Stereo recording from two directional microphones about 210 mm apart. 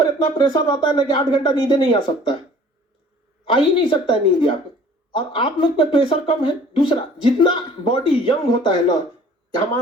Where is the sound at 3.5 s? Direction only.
25° left (ahead or behind).